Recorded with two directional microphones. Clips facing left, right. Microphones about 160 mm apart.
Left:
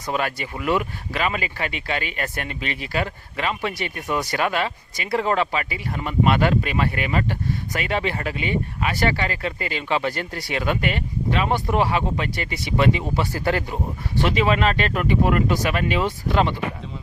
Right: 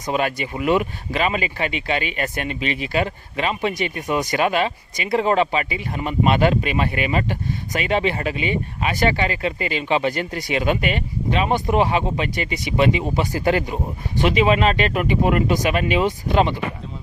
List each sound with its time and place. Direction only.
0.1 s speech: 20° right (ahead or behind)